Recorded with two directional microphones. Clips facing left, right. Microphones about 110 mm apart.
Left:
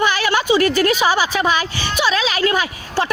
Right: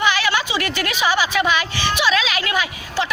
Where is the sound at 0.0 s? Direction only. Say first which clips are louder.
Left 2 dB; 45° left (ahead or behind).